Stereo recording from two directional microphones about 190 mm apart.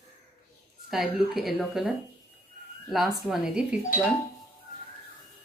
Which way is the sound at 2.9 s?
Centre (ahead or behind).